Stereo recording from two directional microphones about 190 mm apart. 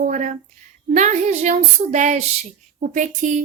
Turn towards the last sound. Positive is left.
turn(degrees=-40)  # may be behind; listen again after turning